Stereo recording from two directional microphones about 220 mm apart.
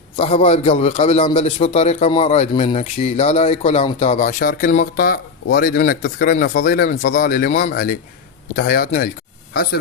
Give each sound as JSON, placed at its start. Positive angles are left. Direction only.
{"t": 0.2, "sound": "a man's voice", "side_deg": 25}